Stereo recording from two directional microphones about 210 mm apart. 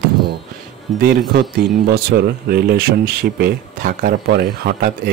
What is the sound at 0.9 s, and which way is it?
Speech, 45° right (ahead or behind).